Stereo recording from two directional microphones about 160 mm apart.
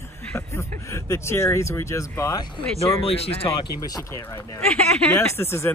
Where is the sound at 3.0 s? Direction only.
35° left (ahead or behind).